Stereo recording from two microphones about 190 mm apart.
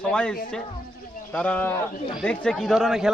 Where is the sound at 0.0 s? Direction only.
5° left (ahead or behind).